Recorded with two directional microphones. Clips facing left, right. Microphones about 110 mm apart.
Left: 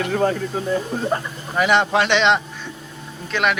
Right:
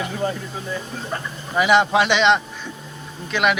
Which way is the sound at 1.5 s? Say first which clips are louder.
Right 1 dB; 5° right (ahead or behind).